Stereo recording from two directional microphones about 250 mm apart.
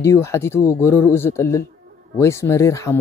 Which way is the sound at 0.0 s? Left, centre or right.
Centre.